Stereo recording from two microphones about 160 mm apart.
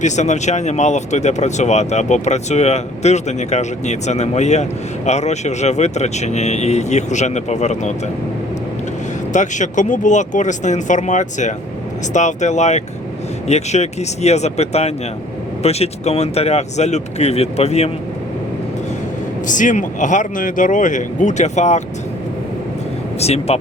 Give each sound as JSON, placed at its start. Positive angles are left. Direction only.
{"t": 0.0, "sound": "speech", "side_deg": 45}
{"t": 9.3, "sound": "speech", "side_deg": 50}
{"t": 19.5, "sound": "speech", "side_deg": 55}
{"t": 23.2, "sound": "speech", "side_deg": 40}